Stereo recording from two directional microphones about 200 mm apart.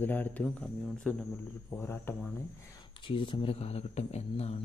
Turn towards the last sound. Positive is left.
turn(degrees=30)  # may be behind; listen again after turning